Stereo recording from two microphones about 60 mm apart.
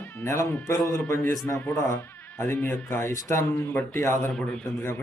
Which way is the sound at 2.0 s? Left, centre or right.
Left.